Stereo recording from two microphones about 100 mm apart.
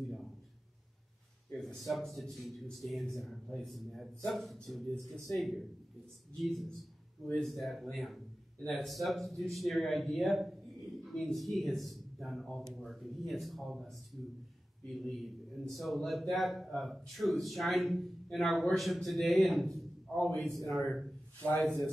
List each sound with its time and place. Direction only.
1.5 s a man's voice: centre (ahead or behind)
21.4 s a man's voice: 15° left (ahead or behind)